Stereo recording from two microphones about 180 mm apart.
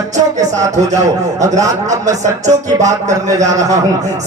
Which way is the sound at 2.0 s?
40° right (ahead or behind).